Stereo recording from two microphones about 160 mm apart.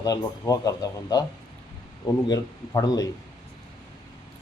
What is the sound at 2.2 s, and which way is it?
Speech, 25° left (ahead or behind).